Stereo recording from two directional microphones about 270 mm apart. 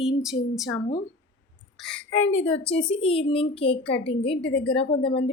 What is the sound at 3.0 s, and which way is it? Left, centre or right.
A child's voice, left.